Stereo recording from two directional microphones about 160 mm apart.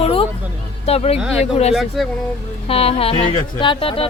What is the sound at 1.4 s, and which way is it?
Speech, 40° left (ahead or behind).